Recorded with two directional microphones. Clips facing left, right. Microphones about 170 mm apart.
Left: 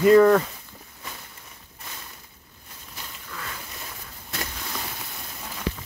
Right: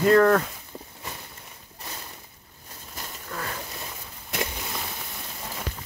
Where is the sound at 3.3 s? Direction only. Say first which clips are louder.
Right 4 dB; 45° right (ahead or behind).